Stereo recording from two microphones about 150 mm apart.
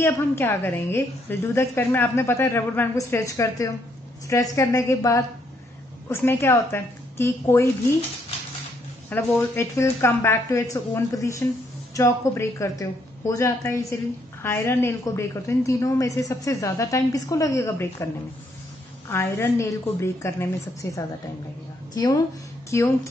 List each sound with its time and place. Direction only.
0.0 s a woman's voice: 15° left (ahead or behind)
9.1 s a woman's voice: 15° left (ahead or behind)
19.0 s a woman's voice: 15° left (ahead or behind)
21.9 s a woman's voice: 25° left (ahead or behind)